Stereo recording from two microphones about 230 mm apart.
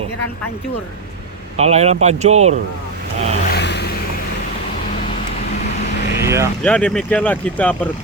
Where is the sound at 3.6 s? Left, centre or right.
Left.